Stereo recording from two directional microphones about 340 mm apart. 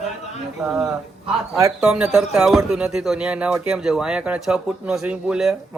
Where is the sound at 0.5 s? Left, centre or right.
Centre.